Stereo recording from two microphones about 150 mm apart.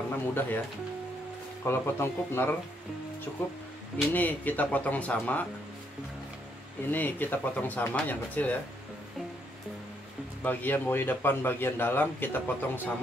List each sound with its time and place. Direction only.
0.1 s a man's voice: 15° left (ahead or behind)
1.6 s a man's voice: 15° left (ahead or behind)
4.1 s a man's voice: 10° left (ahead or behind)
6.9 s a man's voice: 10° left (ahead or behind)
10.4 s a man's voice: 10° left (ahead or behind)